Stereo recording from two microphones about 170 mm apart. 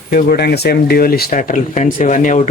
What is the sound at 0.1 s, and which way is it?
Speech, 65° left (ahead or behind).